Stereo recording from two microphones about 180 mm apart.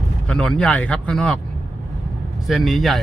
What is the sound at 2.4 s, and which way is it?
Speech, centre (ahead or behind).